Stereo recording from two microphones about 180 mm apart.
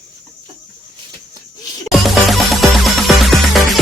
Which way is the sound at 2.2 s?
Centre (ahead or behind).